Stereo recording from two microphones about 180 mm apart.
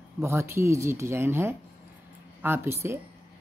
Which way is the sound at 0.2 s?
15° right (ahead or behind).